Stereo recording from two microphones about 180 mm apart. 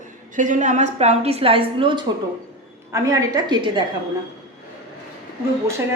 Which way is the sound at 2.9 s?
20° right (ahead or behind).